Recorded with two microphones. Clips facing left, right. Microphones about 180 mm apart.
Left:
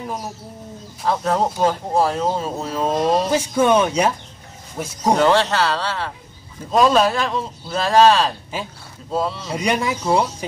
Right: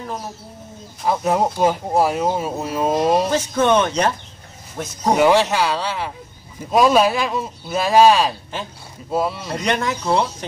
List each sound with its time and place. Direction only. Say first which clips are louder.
1.0 s speech: right 1 dB; 10° right (ahead or behind)
3.3 s speech: left 1 dB; 10° left (ahead or behind)
5.1 s speech: right 1 dB; 10° right (ahead or behind)
9.5 s speech: left 1 dB; 10° left (ahead or behind)